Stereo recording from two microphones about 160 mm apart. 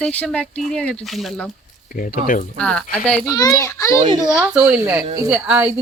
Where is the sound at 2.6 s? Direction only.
5° left (ahead or behind).